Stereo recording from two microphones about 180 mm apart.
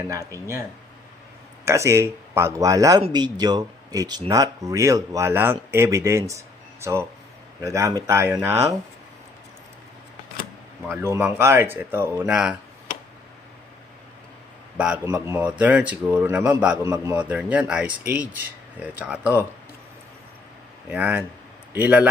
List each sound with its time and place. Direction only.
0.1 s speech: 20° right (ahead or behind)
1.6 s speech: 15° right (ahead or behind)
7.6 s speech: 15° right (ahead or behind)
10.8 s speech: 15° right (ahead or behind)
15.0 s speech: 15° right (ahead or behind)
20.9 s a man's voice: 10° right (ahead or behind)